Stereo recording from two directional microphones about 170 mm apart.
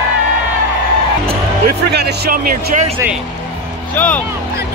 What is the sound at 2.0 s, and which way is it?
Speech, 70° right (ahead or behind).